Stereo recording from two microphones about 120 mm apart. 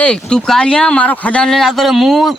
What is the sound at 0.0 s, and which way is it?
Speech, 5° left (ahead or behind).